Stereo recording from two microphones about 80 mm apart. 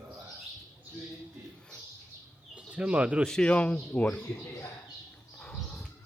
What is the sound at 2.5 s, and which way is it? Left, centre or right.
Speech, centre.